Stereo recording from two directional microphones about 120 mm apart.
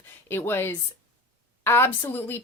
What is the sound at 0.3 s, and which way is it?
A woman's voice, 20° left (ahead or behind).